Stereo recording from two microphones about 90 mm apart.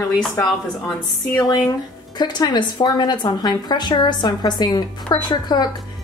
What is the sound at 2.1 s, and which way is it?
A woman's voice, 55° left (ahead or behind).